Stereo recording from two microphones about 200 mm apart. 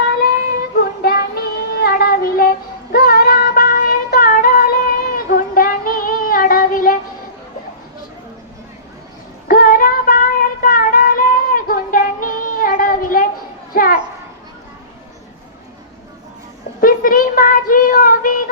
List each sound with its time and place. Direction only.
0.8 s child singing: 50° left (ahead or behind)
2.9 s female singing: 50° left (ahead or behind)
5.1 s child singing: 45° left (ahead or behind)
9.5 s music: 45° left (ahead or behind)
13.7 s a sound: 45° left (ahead or behind)
16.8 s child singing: 45° left (ahead or behind)